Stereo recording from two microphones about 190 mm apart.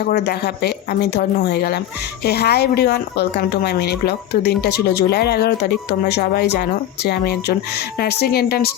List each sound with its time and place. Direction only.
0.0 s speech: 60° left (ahead or behind)